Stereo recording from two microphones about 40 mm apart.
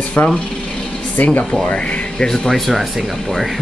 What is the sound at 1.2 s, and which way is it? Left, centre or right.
Speech, left.